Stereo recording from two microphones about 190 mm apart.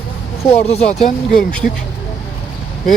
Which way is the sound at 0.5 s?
35° left (ahead or behind).